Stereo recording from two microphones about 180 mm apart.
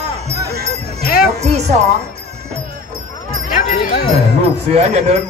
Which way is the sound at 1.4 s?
35° right (ahead or behind).